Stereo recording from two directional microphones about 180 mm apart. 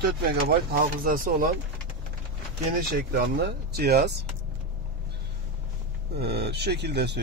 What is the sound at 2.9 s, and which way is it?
Speech, 55° right (ahead or behind).